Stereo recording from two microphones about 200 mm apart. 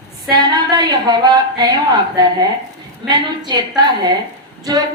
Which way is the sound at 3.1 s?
20° right (ahead or behind).